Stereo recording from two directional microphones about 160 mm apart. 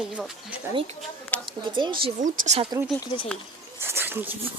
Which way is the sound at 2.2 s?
55° right (ahead or behind).